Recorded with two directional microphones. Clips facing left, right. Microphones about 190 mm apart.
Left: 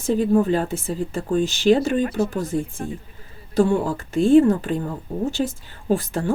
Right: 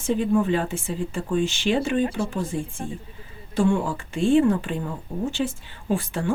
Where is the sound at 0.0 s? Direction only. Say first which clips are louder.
Left 3 dB; 40° left (ahead or behind).